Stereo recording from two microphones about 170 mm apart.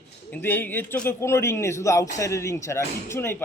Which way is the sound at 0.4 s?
10° left (ahead or behind).